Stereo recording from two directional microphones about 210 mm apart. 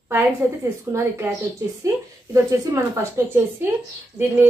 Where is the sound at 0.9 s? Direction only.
15° right (ahead or behind).